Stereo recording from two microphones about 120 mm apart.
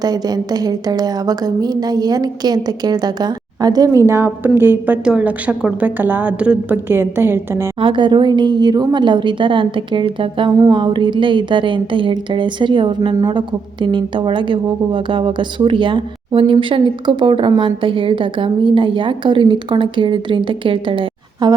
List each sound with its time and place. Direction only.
0.0 s a woman's voice: 35° right (ahead or behind)
7.8 s a woman's voice: 45° right (ahead or behind)